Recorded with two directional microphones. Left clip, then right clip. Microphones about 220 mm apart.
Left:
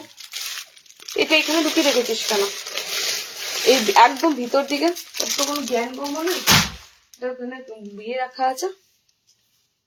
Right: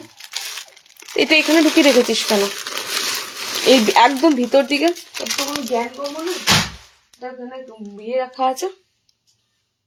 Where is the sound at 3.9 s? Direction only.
35° right (ahead or behind).